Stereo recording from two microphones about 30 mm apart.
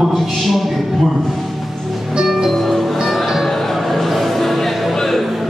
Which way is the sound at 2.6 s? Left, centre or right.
Centre.